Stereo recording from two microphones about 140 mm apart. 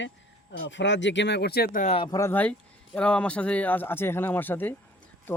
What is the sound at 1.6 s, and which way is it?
Speech, 75° left (ahead or behind).